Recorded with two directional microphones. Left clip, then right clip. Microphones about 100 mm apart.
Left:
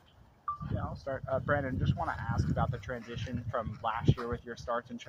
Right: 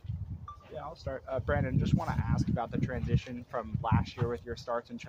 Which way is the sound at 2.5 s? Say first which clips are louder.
Even; 55° right (ahead or behind).